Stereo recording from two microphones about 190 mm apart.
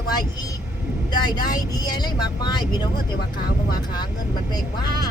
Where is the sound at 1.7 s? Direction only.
20° left (ahead or behind).